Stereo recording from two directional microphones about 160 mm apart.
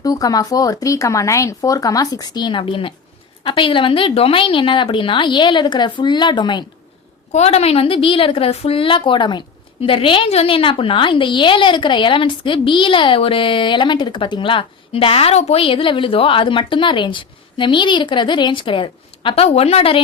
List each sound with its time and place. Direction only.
0.0 s a woman's voice: 20° left (ahead or behind)
7.3 s a woman's voice: 40° left (ahead or behind)